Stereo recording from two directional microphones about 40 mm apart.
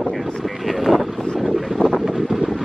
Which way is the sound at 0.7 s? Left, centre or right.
Centre.